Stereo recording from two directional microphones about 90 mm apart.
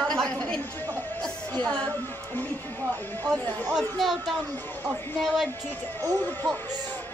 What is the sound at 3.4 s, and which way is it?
Speech, 20° left (ahead or behind).